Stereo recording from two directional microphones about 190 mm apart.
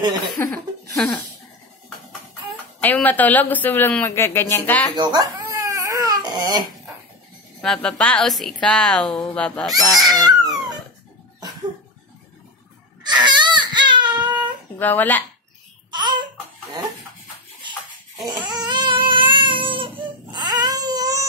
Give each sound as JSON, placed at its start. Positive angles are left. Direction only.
{"t": 0.4, "sound": "a woman's voice", "side_deg": 15}
{"t": 2.8, "sound": "speech", "side_deg": 10}
{"t": 4.9, "sound": "crying", "side_deg": -20}
{"t": 7.6, "sound": "a woman's voice", "side_deg": 5}
{"t": 10.0, "sound": "a sound", "side_deg": -20}
{"t": 13.0, "sound": "baby cry", "side_deg": -25}
{"t": 14.8, "sound": "speech", "side_deg": 10}
{"t": 15.9, "sound": "babbling", "side_deg": -25}
{"t": 18.3, "sound": "baby cry", "side_deg": -20}